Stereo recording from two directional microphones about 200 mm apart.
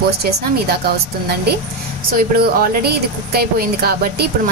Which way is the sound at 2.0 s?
50° right (ahead or behind).